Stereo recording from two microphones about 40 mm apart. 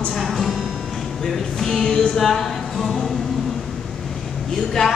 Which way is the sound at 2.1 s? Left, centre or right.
Centre.